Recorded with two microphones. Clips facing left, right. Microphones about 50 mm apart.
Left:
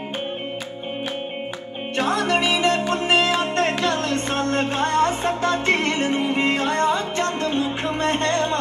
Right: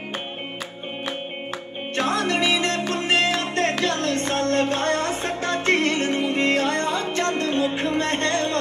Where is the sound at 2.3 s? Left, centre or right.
Left.